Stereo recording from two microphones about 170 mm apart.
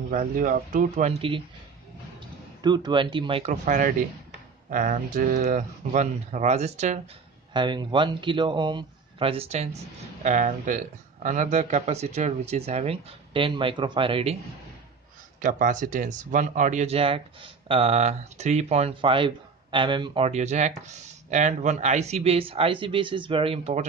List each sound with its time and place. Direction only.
0.1 s speech: 50° right (ahead or behind)
2.6 s a man's voice: 25° right (ahead or behind)
3.6 s speech: 50° right (ahead or behind)
7.5 s a man's voice: 25° right (ahead or behind)
10.2 s speech: 50° right (ahead or behind); by 14.3 s 30° right (ahead or behind)
15.4 s speech: 50° right (ahead or behind)